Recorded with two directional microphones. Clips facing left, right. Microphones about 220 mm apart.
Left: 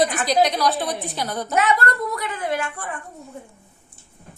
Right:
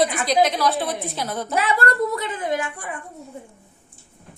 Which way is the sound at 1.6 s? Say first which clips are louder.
Even; 30° right (ahead or behind).